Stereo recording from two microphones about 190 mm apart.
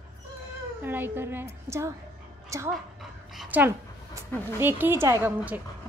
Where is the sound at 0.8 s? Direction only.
10° right (ahead or behind).